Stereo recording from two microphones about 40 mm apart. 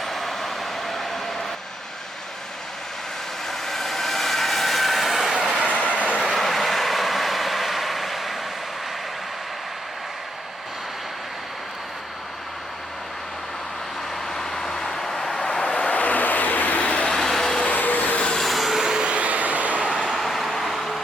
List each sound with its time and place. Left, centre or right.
0.0 s vehicle: centre
3.5 s vehicle: centre
5.6 s train: left
6.2 s vehicle: centre
14.3 s vehicle: centre; by 16.0 s left
16.0 s vehicle: left
16.8 s vehicle: left
17.2 s vehicle: centre
17.7 s vehicle: left
18.3 s train: centre
19.0 s train: right
20.0 s vehicle: centre